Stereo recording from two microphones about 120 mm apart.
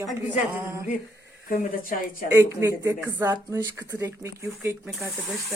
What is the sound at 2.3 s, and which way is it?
Speech, 20° right (ahead or behind).